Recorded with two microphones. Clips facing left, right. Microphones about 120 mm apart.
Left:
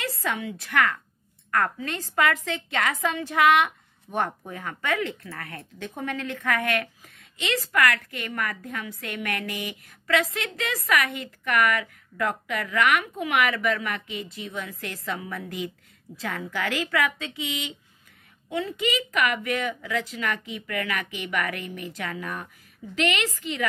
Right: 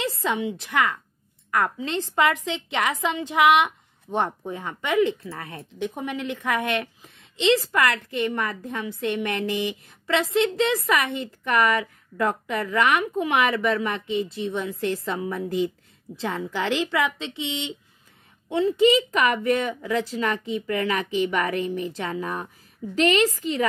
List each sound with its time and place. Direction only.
0.0 s a woman's voice: 20° right (ahead or behind)